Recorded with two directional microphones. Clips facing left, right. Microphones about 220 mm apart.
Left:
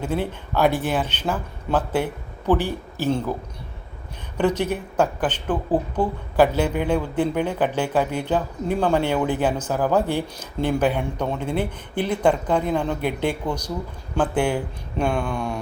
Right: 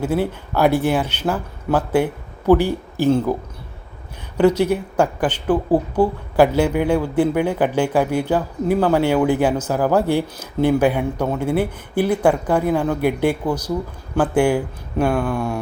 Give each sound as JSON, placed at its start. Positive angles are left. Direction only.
{"t": 0.0, "sound": "speech", "side_deg": -10}
{"t": 4.4, "sound": "speech", "side_deg": -10}